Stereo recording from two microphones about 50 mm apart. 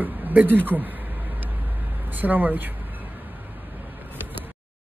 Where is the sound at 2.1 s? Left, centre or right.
Right.